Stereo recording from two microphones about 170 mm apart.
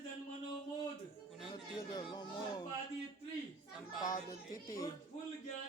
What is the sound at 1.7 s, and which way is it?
Speech, 25° left (ahead or behind).